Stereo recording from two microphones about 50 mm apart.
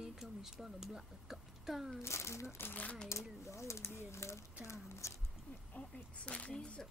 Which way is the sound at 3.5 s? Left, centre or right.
Left.